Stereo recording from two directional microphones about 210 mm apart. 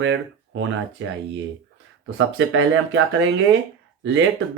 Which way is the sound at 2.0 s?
70° right (ahead or behind).